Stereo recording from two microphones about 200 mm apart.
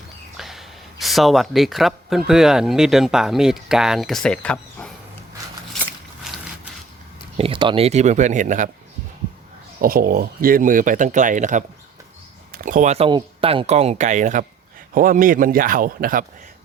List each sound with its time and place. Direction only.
0.3 s speech: centre (ahead or behind)
7.3 s speech: 25° right (ahead or behind)
9.8 s speech: 45° right (ahead or behind)